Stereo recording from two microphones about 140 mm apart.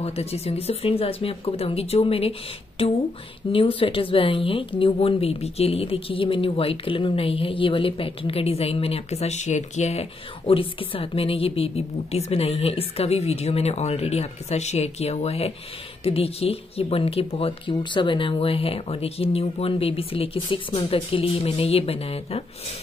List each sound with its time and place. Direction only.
0.0 s a woman's voice: 45° left (ahead or behind)
3.5 s a woman's voice: 40° left (ahead or behind)